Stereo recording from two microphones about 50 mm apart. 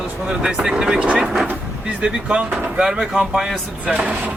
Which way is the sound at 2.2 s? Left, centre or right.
Right.